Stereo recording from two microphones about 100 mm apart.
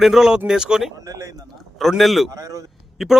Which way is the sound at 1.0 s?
35° right (ahead or behind).